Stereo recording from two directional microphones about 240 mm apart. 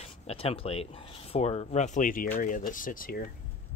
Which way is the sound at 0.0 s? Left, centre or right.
Left.